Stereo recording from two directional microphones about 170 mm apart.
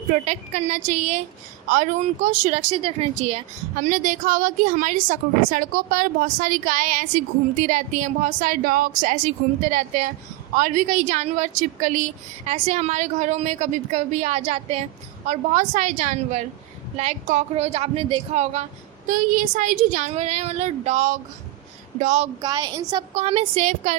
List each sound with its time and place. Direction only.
0.1 s speech: 40° right (ahead or behind)
19.1 s speech: 50° right (ahead or behind)
22.4 s a woman's voice: 25° right (ahead or behind)
23.1 s speech: 35° right (ahead or behind)